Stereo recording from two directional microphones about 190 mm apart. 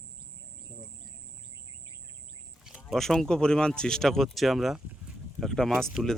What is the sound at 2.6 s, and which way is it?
Speech, 5° right (ahead or behind).